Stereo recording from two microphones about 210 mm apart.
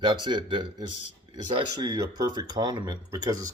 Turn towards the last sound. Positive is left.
turn(degrees=-20)  # may be behind; listen again after turning